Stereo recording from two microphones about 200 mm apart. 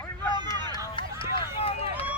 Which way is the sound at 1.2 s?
25° left (ahead or behind).